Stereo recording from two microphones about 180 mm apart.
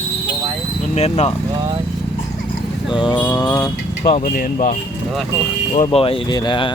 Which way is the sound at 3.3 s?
25° left (ahead or behind).